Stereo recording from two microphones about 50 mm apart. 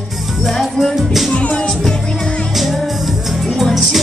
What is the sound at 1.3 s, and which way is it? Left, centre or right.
Music, left.